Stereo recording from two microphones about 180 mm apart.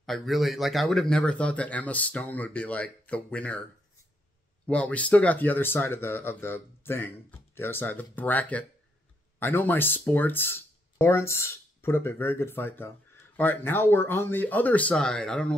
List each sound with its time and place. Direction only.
0.0 s speech: centre (ahead or behind)
4.6 s speech: 5° left (ahead or behind)